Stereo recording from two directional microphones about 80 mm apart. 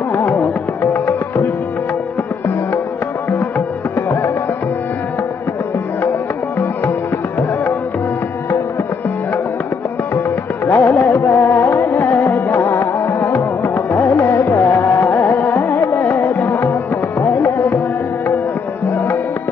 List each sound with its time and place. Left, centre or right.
0.1 s music: left
3.3 s music: left
10.7 s music: left